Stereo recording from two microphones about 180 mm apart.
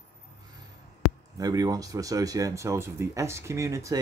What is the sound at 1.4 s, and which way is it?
Speech, 20° right (ahead or behind).